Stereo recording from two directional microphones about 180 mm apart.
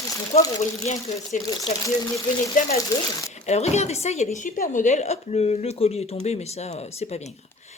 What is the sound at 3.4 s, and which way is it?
Speech, 40° left (ahead or behind).